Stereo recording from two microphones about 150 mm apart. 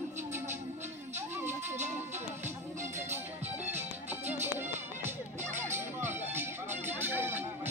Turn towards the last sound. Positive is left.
turn(degrees=-15)  # may be behind; listen again after turning